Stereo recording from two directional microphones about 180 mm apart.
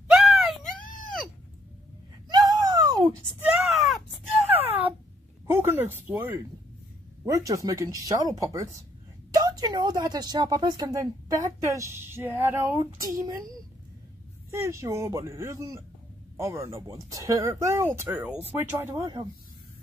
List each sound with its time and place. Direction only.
0.1 s wail: centre (ahead or behind)
2.2 s a sound: 20° right (ahead or behind)
3.3 s wail: 5° right (ahead or behind)
5.5 s a woman's voice: 15° right (ahead or behind)
14.5 s speech: 15° right (ahead or behind)